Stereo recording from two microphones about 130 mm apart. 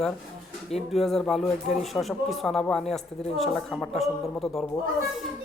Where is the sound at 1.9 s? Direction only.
Centre (ahead or behind).